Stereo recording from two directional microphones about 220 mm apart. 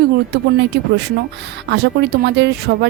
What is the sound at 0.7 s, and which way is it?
Speech, 55° right (ahead or behind).